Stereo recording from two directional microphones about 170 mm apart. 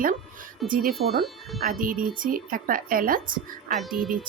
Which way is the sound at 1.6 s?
55° right (ahead or behind).